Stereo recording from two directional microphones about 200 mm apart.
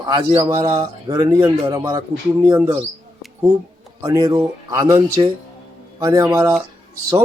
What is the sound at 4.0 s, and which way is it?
Speech, 15° right (ahead or behind).